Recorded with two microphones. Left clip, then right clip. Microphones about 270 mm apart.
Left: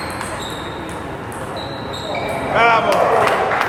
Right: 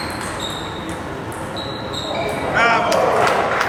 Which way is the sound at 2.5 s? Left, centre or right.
Centre.